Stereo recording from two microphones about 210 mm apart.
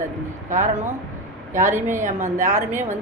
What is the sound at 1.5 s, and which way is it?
Speech, 15° right (ahead or behind).